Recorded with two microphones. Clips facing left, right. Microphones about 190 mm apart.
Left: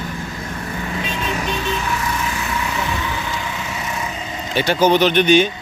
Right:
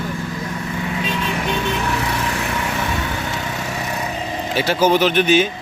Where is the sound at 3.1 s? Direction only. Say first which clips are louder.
Right 1 dB; 45° right (ahead or behind).